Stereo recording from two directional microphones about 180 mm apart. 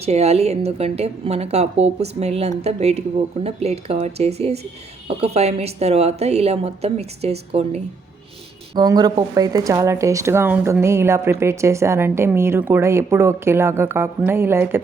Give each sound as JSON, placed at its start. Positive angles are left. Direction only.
{"t": 0.0, "sound": "a woman's voice", "side_deg": -35}
{"t": 8.7, "sound": "speech", "side_deg": -20}